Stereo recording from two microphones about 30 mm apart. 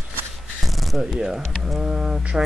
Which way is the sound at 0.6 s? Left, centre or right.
Centre.